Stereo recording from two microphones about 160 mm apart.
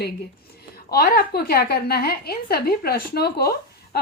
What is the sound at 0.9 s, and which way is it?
A woman's voice, 75° left (ahead or behind).